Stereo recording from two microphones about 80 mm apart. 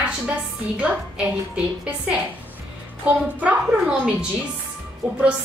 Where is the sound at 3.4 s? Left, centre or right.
Centre.